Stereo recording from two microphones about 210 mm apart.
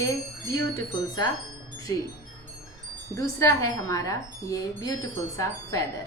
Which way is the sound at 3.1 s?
15° left (ahead or behind).